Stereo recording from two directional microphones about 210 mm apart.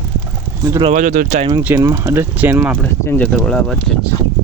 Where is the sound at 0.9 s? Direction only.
35° right (ahead or behind).